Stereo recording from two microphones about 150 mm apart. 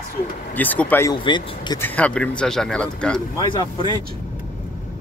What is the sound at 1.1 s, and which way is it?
Speech, 30° left (ahead or behind).